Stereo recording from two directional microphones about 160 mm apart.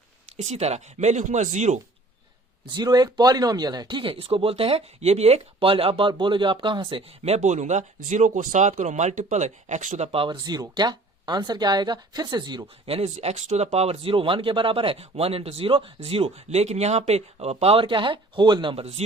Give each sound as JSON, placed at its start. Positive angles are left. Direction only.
{"t": 0.3, "sound": "speech", "side_deg": -45}
{"t": 2.7, "sound": "speech", "side_deg": -25}